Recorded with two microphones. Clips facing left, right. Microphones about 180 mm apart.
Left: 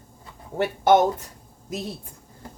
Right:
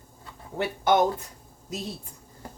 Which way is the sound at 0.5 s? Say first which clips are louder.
Left 4 dB; 45° left (ahead or behind).